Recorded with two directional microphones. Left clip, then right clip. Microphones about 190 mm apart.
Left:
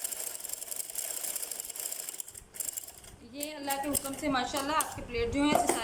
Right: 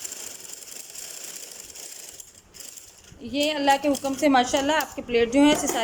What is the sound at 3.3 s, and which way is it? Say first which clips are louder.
Speech: right 14 dB; 40° right (ahead or behind).